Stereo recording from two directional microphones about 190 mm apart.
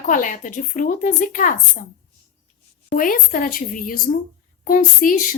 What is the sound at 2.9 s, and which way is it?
A woman's voice, 45° left (ahead or behind).